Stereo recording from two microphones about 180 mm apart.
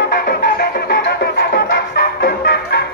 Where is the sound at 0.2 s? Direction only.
60° left (ahead or behind).